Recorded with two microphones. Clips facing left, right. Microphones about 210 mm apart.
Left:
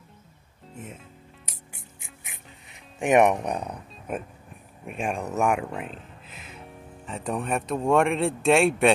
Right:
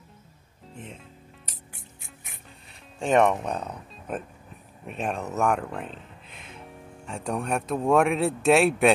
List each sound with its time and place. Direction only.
0.7 s music: 5° left (ahead or behind)
3.0 s speech: 15° left (ahead or behind); by 8.9 s centre (ahead or behind)